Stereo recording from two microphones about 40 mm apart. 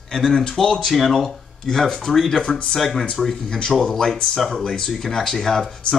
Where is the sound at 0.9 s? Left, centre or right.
Centre.